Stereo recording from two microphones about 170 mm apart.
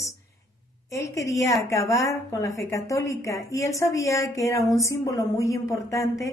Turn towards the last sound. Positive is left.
turn(degrees=20)  # may be behind; listen again after turning